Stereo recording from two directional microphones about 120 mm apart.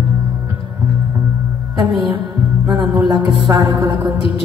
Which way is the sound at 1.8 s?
40° right (ahead or behind).